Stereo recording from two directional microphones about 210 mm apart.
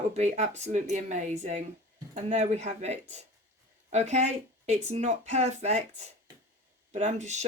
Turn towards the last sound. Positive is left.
turn(degrees=-35)  # may be behind; listen again after turning